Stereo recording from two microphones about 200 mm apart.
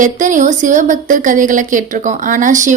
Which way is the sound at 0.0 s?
40° right (ahead or behind).